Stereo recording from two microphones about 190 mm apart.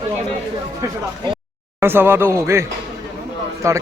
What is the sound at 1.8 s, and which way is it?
Speech, 10° right (ahead or behind).